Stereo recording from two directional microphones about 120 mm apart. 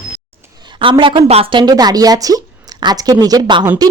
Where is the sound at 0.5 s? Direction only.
40° right (ahead or behind).